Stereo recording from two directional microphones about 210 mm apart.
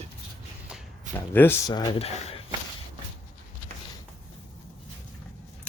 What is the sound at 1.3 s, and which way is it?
Speech, 10° left (ahead or behind).